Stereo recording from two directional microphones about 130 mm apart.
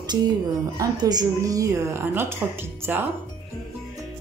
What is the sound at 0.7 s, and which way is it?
A woman's voice, 30° right (ahead or behind).